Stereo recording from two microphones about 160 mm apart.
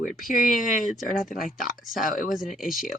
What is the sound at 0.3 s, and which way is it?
Speech, 60° left (ahead or behind).